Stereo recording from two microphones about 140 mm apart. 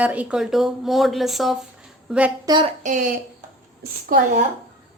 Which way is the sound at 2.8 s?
65° right (ahead or behind).